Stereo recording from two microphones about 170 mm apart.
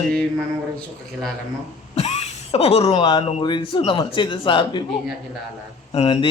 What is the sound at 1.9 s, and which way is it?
Speech, 40° left (ahead or behind).